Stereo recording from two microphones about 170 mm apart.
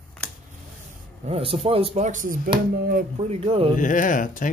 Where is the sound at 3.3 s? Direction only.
35° right (ahead or behind).